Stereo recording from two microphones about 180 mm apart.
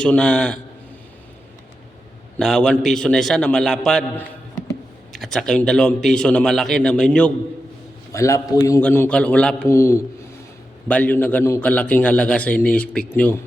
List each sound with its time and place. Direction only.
0.0 s a man's voice: 5° left (ahead or behind)
2.4 s a man's voice: 5° left (ahead or behind)
8.1 s a man's voice: 15° left (ahead or behind)